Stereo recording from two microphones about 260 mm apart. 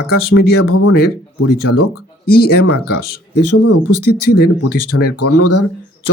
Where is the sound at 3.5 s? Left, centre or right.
Left.